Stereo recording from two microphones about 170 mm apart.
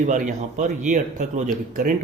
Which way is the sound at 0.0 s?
50° right (ahead or behind).